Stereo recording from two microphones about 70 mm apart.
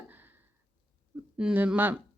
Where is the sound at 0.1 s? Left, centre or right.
Right.